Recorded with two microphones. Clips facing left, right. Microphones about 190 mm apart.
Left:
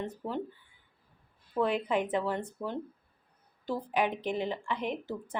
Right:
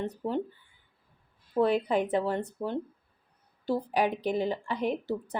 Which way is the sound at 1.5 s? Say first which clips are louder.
Right 4 dB; 35° right (ahead or behind).